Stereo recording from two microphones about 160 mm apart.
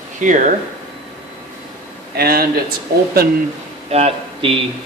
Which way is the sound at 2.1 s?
70° right (ahead or behind).